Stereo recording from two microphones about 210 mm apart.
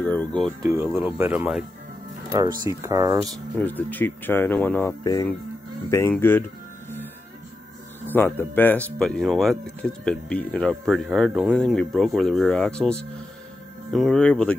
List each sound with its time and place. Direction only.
0.0 s speech: 5° left (ahead or behind)
0.6 s speech: 15° right (ahead or behind)
3.5 s speech: 10° left (ahead or behind)
8.1 s speech: 10° left (ahead or behind)